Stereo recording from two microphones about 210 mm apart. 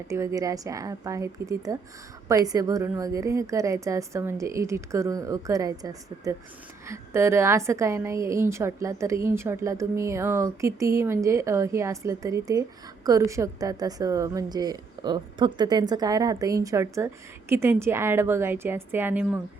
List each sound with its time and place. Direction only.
0.1 s a woman's voice: 15° right (ahead or behind)